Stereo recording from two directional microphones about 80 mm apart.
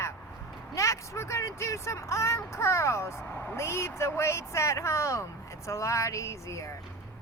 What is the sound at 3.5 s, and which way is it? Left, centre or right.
Speech, left.